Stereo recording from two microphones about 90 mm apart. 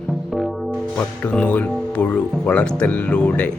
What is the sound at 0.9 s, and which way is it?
Speech, 15° left (ahead or behind).